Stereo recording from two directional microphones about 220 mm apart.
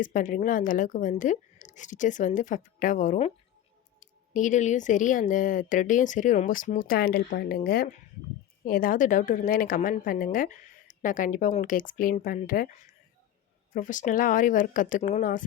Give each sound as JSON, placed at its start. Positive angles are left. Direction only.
{"t": 0.0, "sound": "a woman's voice", "side_deg": 35}
{"t": 13.7, "sound": "a woman's voice", "side_deg": 35}